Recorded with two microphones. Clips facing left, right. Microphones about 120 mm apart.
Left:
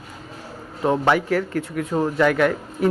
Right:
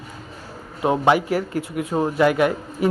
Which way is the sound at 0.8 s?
10° right (ahead or behind).